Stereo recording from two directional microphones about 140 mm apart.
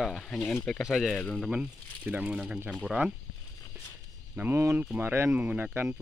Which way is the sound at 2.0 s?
10° right (ahead or behind).